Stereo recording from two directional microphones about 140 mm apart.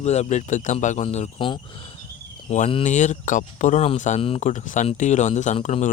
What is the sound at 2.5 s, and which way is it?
Speech, 55° left (ahead or behind).